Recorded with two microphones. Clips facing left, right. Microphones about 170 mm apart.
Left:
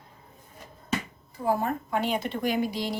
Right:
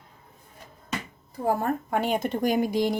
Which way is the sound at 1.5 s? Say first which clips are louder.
Right 1 dB; 50° right (ahead or behind).